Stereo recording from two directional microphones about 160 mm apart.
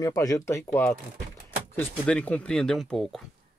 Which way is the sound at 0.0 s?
20° left (ahead or behind).